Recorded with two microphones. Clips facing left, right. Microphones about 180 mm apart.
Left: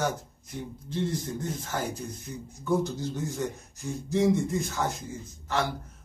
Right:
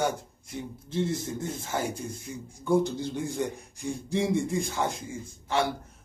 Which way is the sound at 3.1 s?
15° right (ahead or behind).